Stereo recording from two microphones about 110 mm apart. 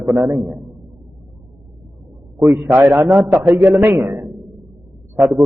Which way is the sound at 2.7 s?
20° right (ahead or behind).